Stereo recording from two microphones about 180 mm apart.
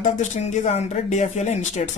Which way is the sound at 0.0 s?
40° left (ahead or behind).